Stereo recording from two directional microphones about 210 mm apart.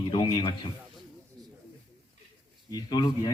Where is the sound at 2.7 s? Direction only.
20° left (ahead or behind).